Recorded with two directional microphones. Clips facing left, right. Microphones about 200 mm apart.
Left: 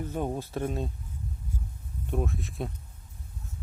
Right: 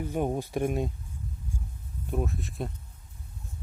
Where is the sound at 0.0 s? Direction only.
15° right (ahead or behind).